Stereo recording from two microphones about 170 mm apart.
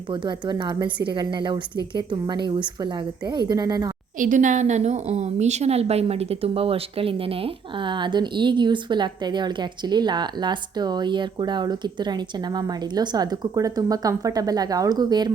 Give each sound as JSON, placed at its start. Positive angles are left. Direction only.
{"t": 0.1, "sound": "a woman's voice", "side_deg": -25}
{"t": 4.2, "sound": "a woman's voice", "side_deg": -50}